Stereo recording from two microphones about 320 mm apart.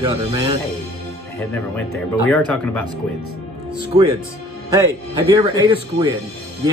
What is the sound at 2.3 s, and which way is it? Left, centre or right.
Speech, centre.